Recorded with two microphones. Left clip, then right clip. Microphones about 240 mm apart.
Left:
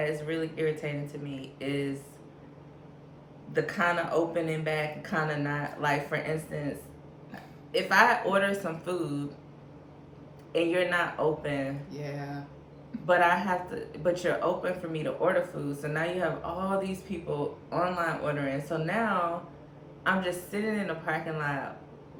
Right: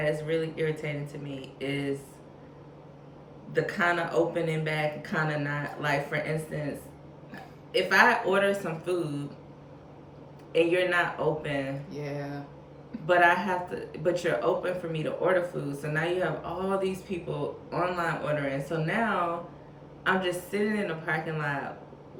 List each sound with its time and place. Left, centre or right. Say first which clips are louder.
0.0 s speech: right 3 dB; centre
3.5 s speech: right 1 dB; centre
7.7 s speech: right 1 dB; centre
10.5 s speech: right 2 dB; centre
11.9 s a sound: right 2 dB; centre
13.1 s speech: right 1 dB; centre